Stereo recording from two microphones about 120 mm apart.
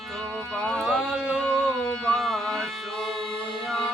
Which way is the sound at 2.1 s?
5° left (ahead or behind).